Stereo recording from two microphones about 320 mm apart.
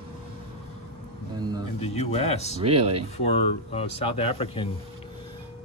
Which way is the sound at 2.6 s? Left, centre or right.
Centre.